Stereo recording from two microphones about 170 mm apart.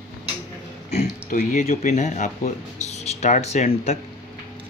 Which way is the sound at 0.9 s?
50° left (ahead or behind).